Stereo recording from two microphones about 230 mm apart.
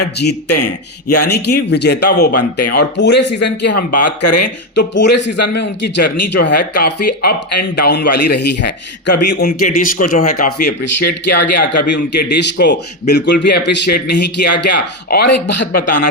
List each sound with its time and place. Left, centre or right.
0.4 s speech: left
1.3 s speech: left
3.7 s speech: left
4.7 s a man's voice: left